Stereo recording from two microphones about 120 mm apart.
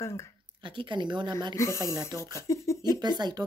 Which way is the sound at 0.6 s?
40° right (ahead or behind).